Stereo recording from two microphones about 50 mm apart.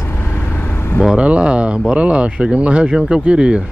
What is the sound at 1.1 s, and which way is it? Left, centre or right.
Speech, right.